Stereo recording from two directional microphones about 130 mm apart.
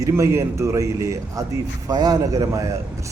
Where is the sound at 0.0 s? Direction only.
20° right (ahead or behind).